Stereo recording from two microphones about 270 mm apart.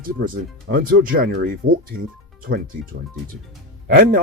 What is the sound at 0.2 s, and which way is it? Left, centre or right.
Speech, right.